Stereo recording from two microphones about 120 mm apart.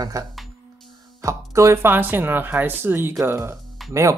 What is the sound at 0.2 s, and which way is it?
Speech, 25° right (ahead or behind).